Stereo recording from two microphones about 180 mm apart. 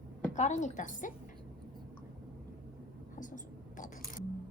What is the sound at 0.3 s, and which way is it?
Speech, 40° left (ahead or behind).